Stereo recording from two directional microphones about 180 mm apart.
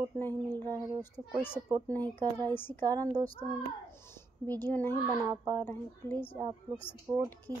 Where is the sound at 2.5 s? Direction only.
10° left (ahead or behind).